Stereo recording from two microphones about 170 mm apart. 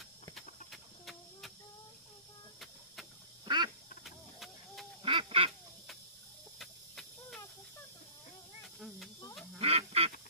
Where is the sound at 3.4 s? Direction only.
25° right (ahead or behind).